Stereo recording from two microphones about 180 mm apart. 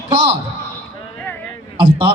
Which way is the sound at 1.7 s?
30° right (ahead or behind).